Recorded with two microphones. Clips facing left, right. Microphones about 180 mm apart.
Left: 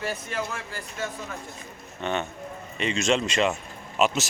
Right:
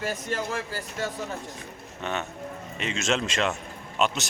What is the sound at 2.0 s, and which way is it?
Speech, 5° right (ahead or behind).